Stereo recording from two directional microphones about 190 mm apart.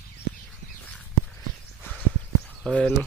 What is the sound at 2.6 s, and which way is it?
Speech, 5° left (ahead or behind).